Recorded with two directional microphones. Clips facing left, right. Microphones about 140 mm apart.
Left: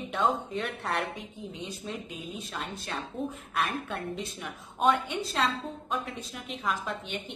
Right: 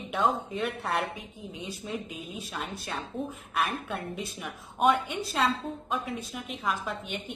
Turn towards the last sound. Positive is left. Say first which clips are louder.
# even
turn(degrees=0)  # may be behind; listen again after turning